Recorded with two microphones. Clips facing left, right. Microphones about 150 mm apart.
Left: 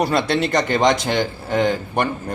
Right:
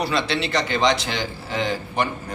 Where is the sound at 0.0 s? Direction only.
50° left (ahead or behind).